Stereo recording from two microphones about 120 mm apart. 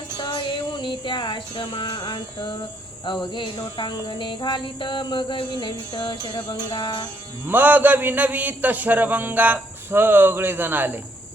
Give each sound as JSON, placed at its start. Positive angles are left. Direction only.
{"t": 0.2, "sound": "music", "side_deg": 40}
{"t": 3.3, "sound": "a sound", "side_deg": 40}
{"t": 7.4, "sound": "a man's voice", "side_deg": -15}